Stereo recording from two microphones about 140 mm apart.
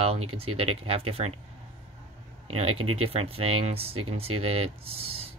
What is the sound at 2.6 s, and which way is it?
Speech, 45° right (ahead or behind).